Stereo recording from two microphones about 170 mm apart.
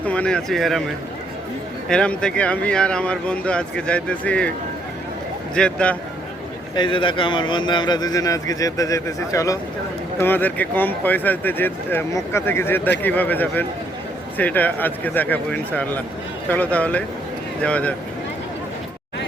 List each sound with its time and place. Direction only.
0.0 s speech: 10° left (ahead or behind)
1.9 s speech: 5° left (ahead or behind)
5.5 s speech: 5° left (ahead or behind)
6.7 s a man's voice: 30° left (ahead or behind); by 17.9 s 10° left (ahead or behind)